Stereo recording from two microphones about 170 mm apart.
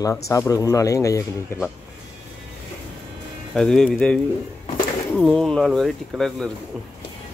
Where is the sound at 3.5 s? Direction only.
5° left (ahead or behind).